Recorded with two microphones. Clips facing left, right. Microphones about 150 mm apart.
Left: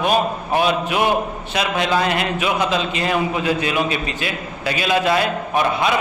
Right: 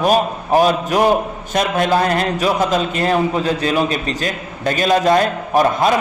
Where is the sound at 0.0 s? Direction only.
40° right (ahead or behind).